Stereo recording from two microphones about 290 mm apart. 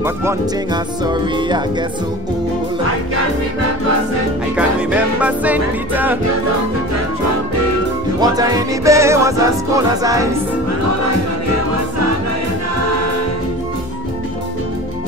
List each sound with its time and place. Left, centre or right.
0.0 s speech: centre
4.6 s music: centre
8.2 s music: centre
11.4 s music: right